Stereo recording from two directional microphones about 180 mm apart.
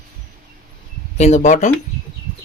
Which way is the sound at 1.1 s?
40° left (ahead or behind).